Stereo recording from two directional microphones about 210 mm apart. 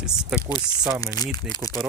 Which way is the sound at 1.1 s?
20° left (ahead or behind).